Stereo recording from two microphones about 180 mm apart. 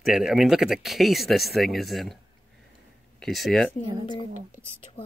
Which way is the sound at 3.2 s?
Centre (ahead or behind).